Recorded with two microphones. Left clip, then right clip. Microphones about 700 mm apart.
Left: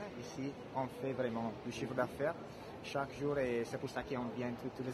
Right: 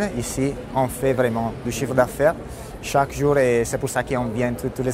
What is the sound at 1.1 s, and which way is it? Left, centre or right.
A man's voice, right.